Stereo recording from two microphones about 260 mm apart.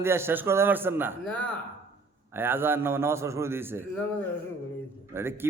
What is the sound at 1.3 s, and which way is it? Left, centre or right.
Speech, centre.